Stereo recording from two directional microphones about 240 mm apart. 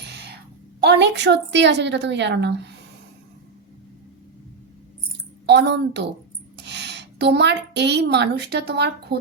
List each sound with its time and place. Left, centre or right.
0.0 s a sound: right
0.8 s a woman's voice: right
5.5 s a woman's voice: right